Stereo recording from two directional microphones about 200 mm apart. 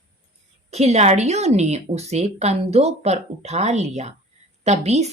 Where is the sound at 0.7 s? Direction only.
35° right (ahead or behind).